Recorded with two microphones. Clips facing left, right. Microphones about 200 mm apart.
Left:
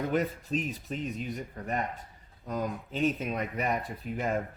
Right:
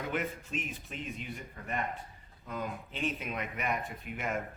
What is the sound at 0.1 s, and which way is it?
Speech, 35° left (ahead or behind).